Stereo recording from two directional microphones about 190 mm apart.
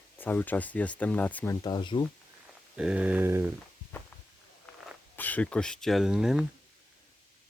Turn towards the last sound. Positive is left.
turn(degrees=-5)  # may be behind; listen again after turning